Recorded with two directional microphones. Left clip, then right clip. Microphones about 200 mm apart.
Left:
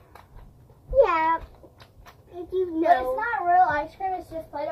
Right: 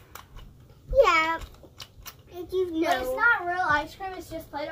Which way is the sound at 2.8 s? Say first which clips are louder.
Left 2 dB; 45° right (ahead or behind).